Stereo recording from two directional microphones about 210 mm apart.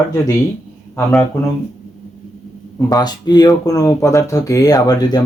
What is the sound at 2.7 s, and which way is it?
Speech, 20° left (ahead or behind).